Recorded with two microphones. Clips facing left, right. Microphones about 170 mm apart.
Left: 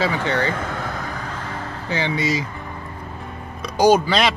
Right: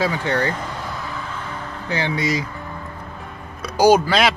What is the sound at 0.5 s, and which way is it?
Vehicle, 55° left (ahead or behind).